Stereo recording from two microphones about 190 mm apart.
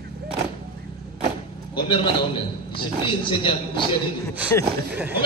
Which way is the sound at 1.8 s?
25° left (ahead or behind).